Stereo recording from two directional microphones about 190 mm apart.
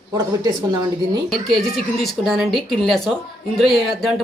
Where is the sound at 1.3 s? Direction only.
Centre (ahead or behind).